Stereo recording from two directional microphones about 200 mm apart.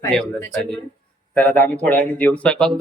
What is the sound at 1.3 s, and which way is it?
A woman's voice, 5° left (ahead or behind).